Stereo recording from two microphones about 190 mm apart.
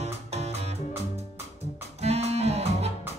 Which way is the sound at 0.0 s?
35° right (ahead or behind).